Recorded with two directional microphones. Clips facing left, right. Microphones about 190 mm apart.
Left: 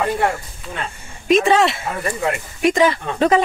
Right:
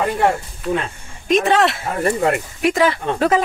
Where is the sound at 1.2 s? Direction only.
Centre (ahead or behind).